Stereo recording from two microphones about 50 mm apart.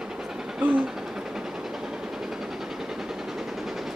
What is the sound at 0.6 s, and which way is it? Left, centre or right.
Train, right.